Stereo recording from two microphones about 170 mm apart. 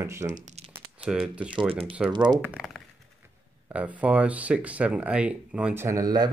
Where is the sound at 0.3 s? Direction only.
45° right (ahead or behind).